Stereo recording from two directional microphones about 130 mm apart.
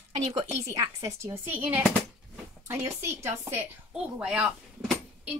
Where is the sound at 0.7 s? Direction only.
25° right (ahead or behind).